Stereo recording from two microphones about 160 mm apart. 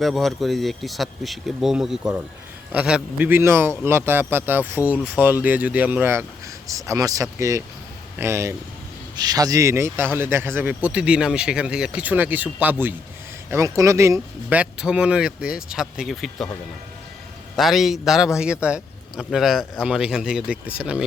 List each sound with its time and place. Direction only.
0.0 s a man's voice: centre (ahead or behind); by 14.6 s 20° right (ahead or behind)
14.6 s speech: 5° right (ahead or behind)
17.6 s speech: centre (ahead or behind)